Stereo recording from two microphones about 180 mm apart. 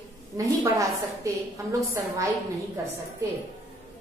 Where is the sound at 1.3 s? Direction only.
15° right (ahead or behind).